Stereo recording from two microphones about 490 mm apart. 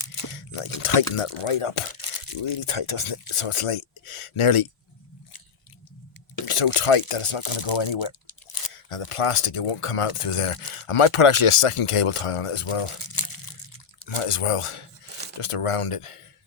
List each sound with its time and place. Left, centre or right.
0.3 s a sound: left
0.8 s speech: left
2.4 s speech: left
6.4 s drip: left
6.7 s speech: left
8.7 s speech: left
13.1 s crunch: left
14.2 s speech: left
15.4 s speech: left